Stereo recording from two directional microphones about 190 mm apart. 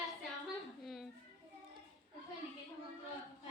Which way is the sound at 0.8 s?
Centre (ahead or behind).